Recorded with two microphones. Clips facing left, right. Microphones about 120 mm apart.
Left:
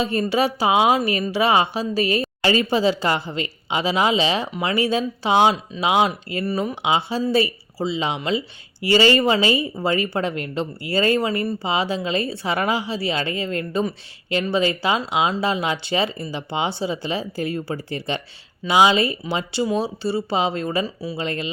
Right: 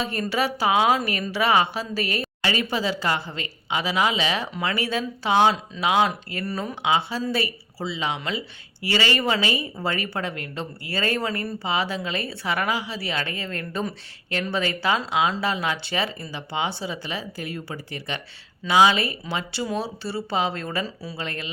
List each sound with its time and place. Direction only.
0.0 s speech: 20° left (ahead or behind)